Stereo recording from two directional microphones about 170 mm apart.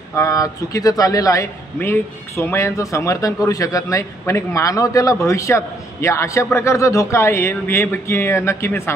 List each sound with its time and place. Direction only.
0.1 s a man's voice: 20° left (ahead or behind)